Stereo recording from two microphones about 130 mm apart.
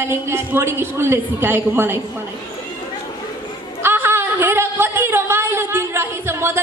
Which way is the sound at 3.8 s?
15° right (ahead or behind).